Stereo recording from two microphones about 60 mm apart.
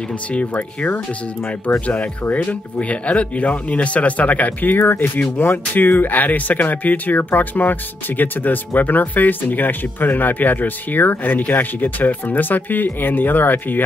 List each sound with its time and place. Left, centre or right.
0.3 s speech: left